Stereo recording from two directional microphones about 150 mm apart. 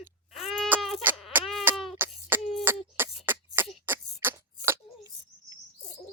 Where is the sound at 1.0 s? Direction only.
10° right (ahead or behind).